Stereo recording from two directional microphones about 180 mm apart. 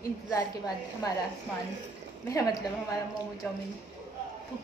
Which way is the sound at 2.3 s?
20° left (ahead or behind).